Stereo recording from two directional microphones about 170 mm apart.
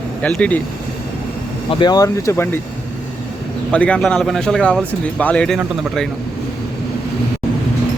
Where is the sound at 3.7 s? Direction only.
5° left (ahead or behind).